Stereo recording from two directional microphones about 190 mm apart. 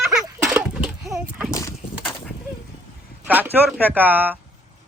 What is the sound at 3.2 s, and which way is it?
Speech, 10° right (ahead or behind).